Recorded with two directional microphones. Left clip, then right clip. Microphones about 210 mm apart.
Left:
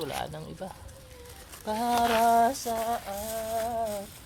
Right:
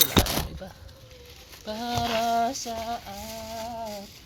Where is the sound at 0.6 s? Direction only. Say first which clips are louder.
Left 3 dB; 25° left (ahead or behind).